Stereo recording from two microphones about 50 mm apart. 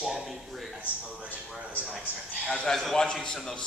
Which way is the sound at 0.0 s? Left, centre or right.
Centre.